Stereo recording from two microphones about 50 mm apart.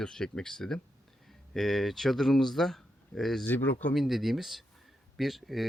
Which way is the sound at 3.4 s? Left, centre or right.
Left.